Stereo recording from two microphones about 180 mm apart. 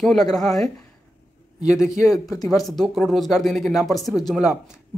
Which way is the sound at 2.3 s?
20° left (ahead or behind).